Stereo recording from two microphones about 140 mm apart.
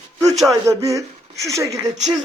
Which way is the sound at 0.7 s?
20° right (ahead or behind).